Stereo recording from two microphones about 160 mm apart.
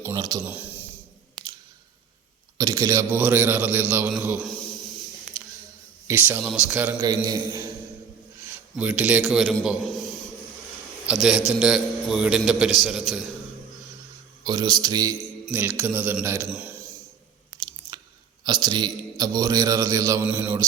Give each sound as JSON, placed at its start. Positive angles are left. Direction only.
{"t": 0.0, "sound": "a man's voice", "side_deg": -20}
{"t": 0.4, "sound": "a sound", "side_deg": -10}
{"t": 2.6, "sound": "a man's voice", "side_deg": -20}
{"t": 6.1, "sound": "a man's voice", "side_deg": -10}
{"t": 7.3, "sound": "a man's voice", "side_deg": -20}
{"t": 8.7, "sound": "a man's voice", "side_deg": -5}
{"t": 11.0, "sound": "a man's voice", "side_deg": -5}
{"t": 14.4, "sound": "a man's voice", "side_deg": -25}
{"t": 15.8, "sound": "a man's voice", "side_deg": -10}
{"t": 17.6, "sound": "chewing", "side_deg": -25}
{"t": 18.4, "sound": "a man's voice", "side_deg": -25}